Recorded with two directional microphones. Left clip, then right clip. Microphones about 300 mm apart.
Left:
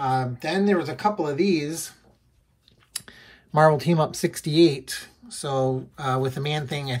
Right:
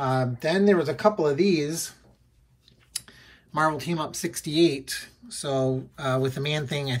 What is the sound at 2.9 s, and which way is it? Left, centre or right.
Speech, centre.